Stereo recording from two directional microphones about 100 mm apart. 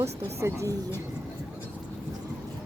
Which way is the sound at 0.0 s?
30° right (ahead or behind).